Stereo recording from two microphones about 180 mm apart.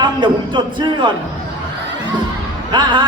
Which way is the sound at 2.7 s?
25° right (ahead or behind).